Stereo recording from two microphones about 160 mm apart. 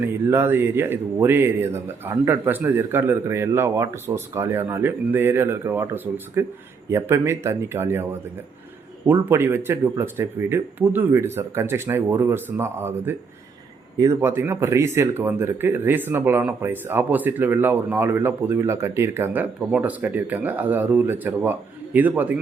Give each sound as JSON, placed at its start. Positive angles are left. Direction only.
{"t": 0.3, "sound": "speech", "side_deg": -15}
{"t": 9.0, "sound": "speech", "side_deg": -15}